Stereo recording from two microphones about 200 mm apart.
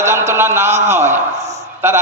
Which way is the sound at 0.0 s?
10° right (ahead or behind).